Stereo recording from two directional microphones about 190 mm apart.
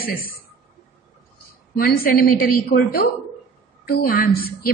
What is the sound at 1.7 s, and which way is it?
A woman's voice, 50° left (ahead or behind).